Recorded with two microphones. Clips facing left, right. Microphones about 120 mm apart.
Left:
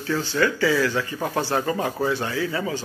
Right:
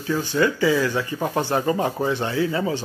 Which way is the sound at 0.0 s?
20° right (ahead or behind).